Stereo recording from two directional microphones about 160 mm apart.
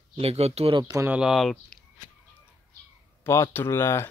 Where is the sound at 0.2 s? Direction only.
40° right (ahead or behind).